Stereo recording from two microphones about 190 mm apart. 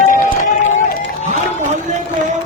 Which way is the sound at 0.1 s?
40° left (ahead or behind).